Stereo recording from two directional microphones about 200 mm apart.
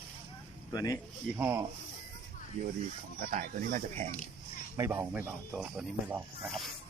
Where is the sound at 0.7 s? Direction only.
15° left (ahead or behind).